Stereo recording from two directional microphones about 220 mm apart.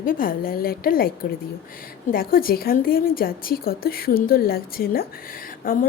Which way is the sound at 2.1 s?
40° left (ahead or behind).